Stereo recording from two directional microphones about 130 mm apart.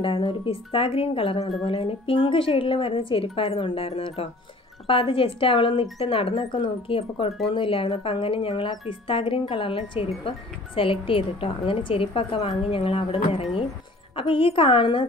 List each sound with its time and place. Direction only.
0.0 s a woman's voice: 40° left (ahead or behind)